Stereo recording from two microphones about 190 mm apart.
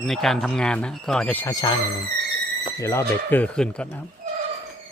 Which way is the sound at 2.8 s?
15° left (ahead or behind).